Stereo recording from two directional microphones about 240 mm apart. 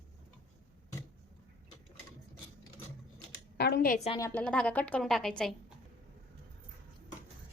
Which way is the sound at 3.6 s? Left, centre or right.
Left.